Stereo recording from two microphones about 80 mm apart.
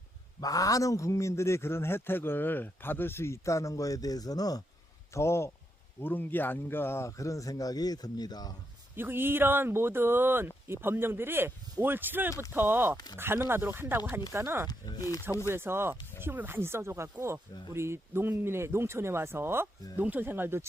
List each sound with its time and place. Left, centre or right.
0.3 s a man's voice: left
5.1 s a man's voice: left
6.0 s a man's voice: left
9.0 s speech: right
14.3 s speech: right
14.7 s a man's voice: left
15.4 s speech: right